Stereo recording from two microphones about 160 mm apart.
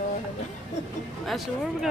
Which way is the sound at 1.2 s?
Centre (ahead or behind).